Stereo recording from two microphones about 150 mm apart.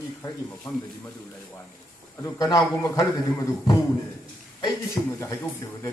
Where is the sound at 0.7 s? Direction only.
25° left (ahead or behind).